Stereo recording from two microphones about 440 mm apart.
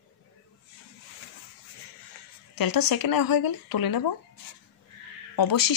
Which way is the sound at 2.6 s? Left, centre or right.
Left.